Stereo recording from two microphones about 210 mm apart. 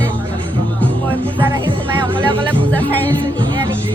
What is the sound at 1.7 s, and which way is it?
Music, 20° right (ahead or behind).